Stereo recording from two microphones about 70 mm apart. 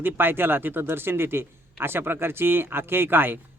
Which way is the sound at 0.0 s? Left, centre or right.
Right.